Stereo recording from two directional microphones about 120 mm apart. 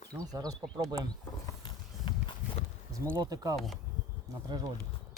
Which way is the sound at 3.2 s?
30° right (ahead or behind).